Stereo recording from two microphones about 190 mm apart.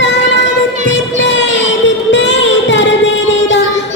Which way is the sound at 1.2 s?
70° left (ahead or behind).